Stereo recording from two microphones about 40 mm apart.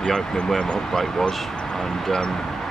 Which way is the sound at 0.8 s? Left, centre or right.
Centre.